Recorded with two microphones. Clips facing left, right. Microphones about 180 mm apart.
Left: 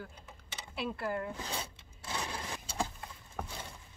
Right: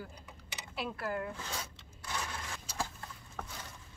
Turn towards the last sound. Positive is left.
turn(degrees=10)  # may be behind; listen again after turning